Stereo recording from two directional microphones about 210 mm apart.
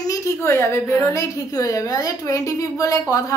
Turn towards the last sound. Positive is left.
turn(degrees=15)  # may be behind; listen again after turning